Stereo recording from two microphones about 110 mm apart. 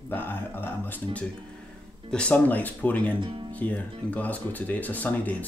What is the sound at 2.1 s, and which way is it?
Speech, 10° left (ahead or behind).